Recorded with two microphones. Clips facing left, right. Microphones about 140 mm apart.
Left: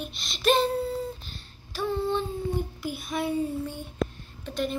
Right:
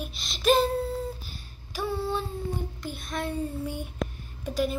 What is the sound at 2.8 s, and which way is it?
Speech, 5° left (ahead or behind).